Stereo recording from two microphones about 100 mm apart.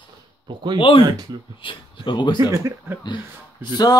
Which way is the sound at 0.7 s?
60° left (ahead or behind).